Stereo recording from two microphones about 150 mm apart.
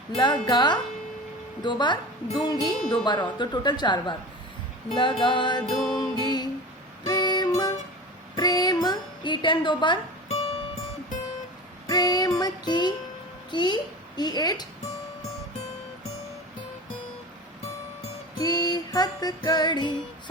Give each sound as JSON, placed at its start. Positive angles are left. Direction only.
{"t": 0.4, "sound": "music", "side_deg": 30}
{"t": 5.6, "sound": "music", "side_deg": 0}
{"t": 6.1, "sound": "music", "side_deg": 25}
{"t": 8.4, "sound": "a sound", "side_deg": 25}
{"t": 11.9, "sound": "music", "side_deg": 25}
{"t": 13.5, "sound": "a child's voice", "side_deg": 30}
{"t": 14.2, "sound": "music", "side_deg": 25}
{"t": 18.3, "sound": "music", "side_deg": 25}